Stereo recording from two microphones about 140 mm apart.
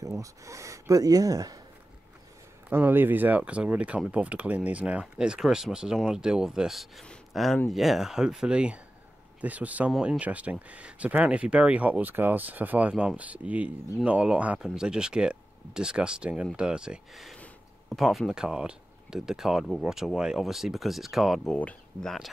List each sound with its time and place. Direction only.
0.0 s speech: 25° right (ahead or behind)
2.7 s speech: 15° right (ahead or behind); by 22.3 s centre (ahead or behind)